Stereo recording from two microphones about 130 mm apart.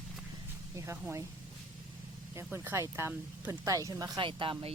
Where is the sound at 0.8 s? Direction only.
20° right (ahead or behind).